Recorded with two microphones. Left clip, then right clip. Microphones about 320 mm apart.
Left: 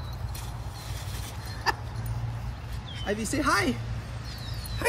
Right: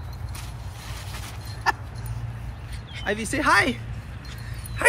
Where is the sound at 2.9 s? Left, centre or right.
Centre.